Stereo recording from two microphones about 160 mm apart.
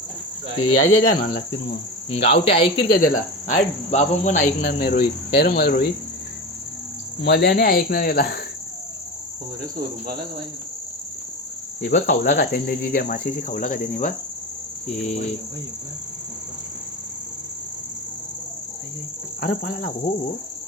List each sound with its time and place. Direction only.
0.9 s cricket: 60° left (ahead or behind)
2.0 s speech: 35° left (ahead or behind)
2.8 s cricket: 65° left (ahead or behind); by 4.4 s 50° left (ahead or behind)
4.6 s cricket: 70° left (ahead or behind)
7.2 s cricket: 90° left; by 8.4 s 70° left (ahead or behind)
11.8 s cricket: 60° left (ahead or behind)
12.3 s cricket: 75° left (ahead or behind); by 14.1 s 55° left (ahead or behind)
14.8 s cricket: 45° left (ahead or behind)
19.4 s cricket: 65° left (ahead or behind)